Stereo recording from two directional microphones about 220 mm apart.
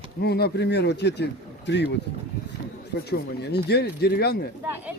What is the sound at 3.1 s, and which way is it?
Speech, 50° left (ahead or behind).